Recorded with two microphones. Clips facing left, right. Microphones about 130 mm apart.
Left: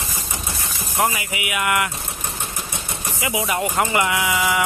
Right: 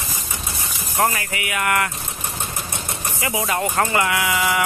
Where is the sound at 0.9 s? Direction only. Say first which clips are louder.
Right 1 dB; 10° left (ahead or behind).